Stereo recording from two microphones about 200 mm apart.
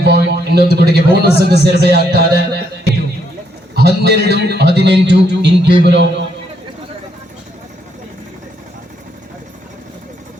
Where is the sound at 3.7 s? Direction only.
55° right (ahead or behind).